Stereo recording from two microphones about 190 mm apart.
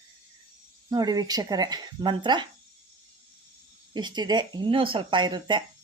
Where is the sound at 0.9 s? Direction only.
20° right (ahead or behind).